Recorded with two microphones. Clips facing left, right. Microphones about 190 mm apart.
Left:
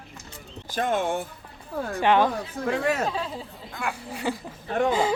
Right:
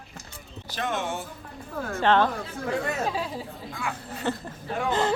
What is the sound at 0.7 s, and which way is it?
Speech, 50° left (ahead or behind).